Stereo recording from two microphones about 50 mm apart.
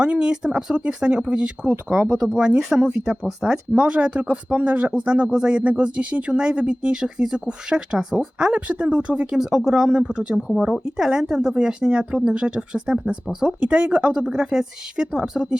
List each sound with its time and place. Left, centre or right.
0.0 s a woman's voice: centre
2.6 s speech: centre
3.7 s speech: right
9.3 s a woman's voice: centre
9.9 s speech: right
10.6 s a woman's voice: centre; by 14.3 s right
14.3 s a woman's voice: centre